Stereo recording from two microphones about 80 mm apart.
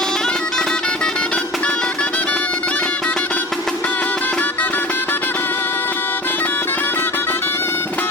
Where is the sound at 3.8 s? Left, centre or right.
Centre.